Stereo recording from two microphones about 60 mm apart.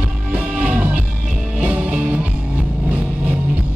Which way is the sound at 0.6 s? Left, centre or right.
Right.